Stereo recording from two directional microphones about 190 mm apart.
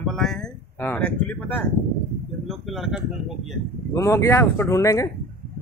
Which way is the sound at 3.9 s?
15° left (ahead or behind).